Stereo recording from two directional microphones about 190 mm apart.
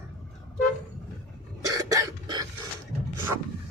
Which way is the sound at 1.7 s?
15° right (ahead or behind).